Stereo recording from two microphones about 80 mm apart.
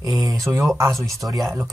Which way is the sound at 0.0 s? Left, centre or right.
Right.